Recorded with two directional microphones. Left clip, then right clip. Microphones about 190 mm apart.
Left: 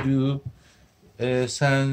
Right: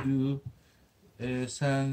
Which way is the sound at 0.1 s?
40° left (ahead or behind).